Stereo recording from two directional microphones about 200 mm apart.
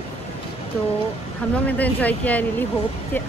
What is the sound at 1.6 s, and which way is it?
Speech, 10° left (ahead or behind).